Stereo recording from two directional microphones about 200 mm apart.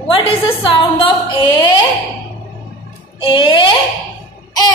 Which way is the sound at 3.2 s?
25° left (ahead or behind).